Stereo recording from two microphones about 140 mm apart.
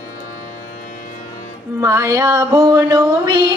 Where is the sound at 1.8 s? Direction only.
20° right (ahead or behind).